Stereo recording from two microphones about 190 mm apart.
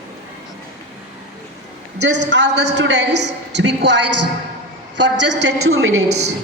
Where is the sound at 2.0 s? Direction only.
65° right (ahead or behind).